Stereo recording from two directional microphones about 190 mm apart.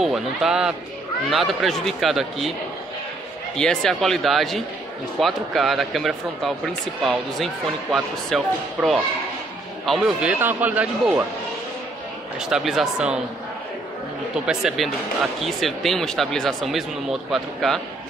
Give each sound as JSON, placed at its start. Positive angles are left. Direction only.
{"t": 0.0, "sound": "speech", "side_deg": -5}
{"t": 3.5, "sound": "a man's voice", "side_deg": 5}
{"t": 12.4, "sound": "speech", "side_deg": 0}
{"t": 14.3, "sound": "speech", "side_deg": -5}